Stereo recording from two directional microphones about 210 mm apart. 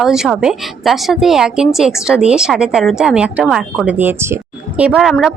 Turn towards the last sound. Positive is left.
turn(degrees=0)  # may be behind; listen again after turning